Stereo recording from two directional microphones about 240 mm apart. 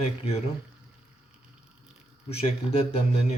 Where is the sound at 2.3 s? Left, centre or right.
Left.